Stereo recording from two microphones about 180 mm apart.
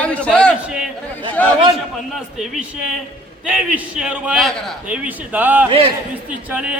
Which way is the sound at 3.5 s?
10° right (ahead or behind).